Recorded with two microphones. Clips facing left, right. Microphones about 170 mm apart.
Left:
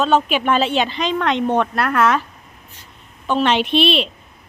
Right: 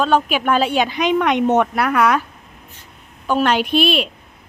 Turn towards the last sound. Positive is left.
turn(degrees=-5)  # may be behind; listen again after turning